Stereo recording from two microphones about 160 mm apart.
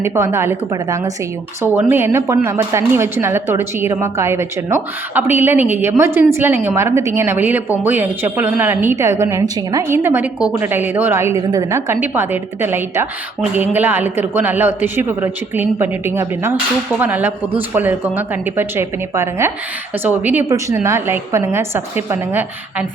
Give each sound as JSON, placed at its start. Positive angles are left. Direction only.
{"t": 0.0, "sound": "a woman's voice", "side_deg": -15}